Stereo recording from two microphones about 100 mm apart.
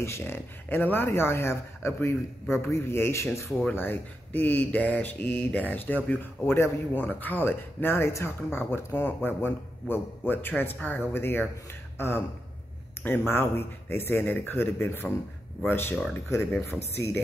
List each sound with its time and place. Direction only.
0.0 s speech: 25° left (ahead or behind)